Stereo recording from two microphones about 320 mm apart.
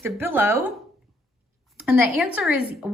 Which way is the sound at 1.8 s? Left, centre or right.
Centre.